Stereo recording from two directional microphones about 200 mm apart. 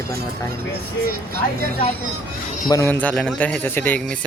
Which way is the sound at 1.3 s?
50° right (ahead or behind).